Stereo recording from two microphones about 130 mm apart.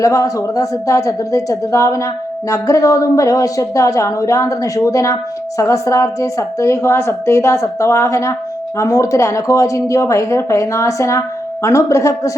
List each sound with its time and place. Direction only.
0.0 s a woman's voice: 25° left (ahead or behind)